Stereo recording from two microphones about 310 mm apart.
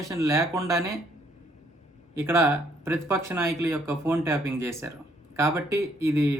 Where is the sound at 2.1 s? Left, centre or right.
Centre.